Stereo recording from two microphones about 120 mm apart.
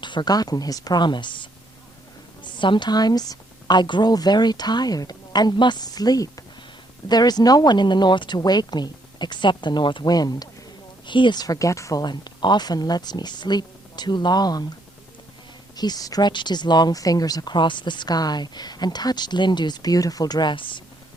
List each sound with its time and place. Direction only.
0.0 s speech: 40° left (ahead or behind)
2.6 s speech: 40° left (ahead or behind)
15.7 s speech: 35° left (ahead or behind)